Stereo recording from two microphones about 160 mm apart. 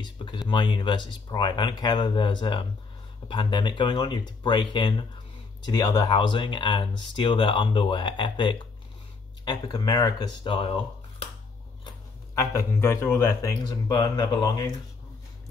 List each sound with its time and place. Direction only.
0.0 s speech: 30° left (ahead or behind)
12.4 s speech: 15° left (ahead or behind)